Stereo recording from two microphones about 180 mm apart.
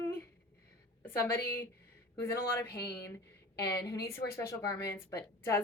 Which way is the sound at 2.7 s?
65° left (ahead or behind).